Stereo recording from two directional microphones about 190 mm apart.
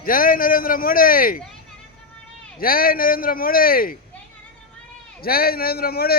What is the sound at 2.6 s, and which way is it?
A man's voice, 50° left (ahead or behind).